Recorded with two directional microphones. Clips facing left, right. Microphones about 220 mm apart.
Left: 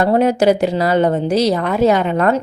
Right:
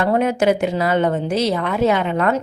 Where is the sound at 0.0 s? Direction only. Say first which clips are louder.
Left 4 dB; 35° left (ahead or behind).